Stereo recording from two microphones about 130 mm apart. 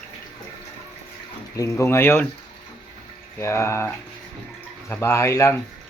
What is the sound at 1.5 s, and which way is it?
Speech, 25° left (ahead or behind).